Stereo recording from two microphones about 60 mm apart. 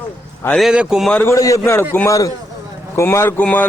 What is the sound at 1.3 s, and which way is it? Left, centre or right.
Speech, left.